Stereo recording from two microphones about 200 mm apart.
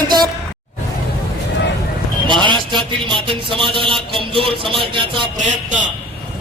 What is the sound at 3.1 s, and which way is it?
Speech, 25° right (ahead or behind).